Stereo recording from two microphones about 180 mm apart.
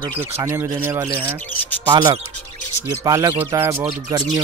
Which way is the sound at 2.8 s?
15° right (ahead or behind).